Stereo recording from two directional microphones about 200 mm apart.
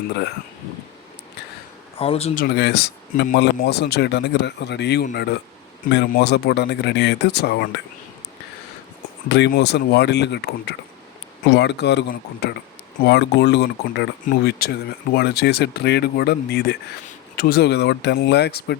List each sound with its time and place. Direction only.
0.1 s speech: 55° left (ahead or behind)
2.0 s speech: 30° left (ahead or behind)
2.3 s speech: 50° left (ahead or behind)
9.3 s speech: 55° left (ahead or behind)